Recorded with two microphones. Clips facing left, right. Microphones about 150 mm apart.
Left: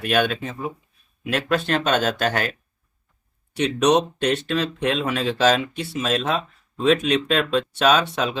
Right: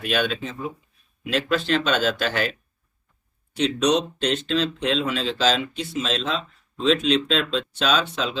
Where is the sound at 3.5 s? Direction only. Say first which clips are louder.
Left 2 dB; 55° left (ahead or behind).